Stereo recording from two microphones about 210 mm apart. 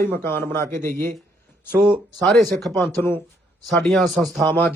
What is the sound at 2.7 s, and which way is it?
A man's voice, 10° left (ahead or behind).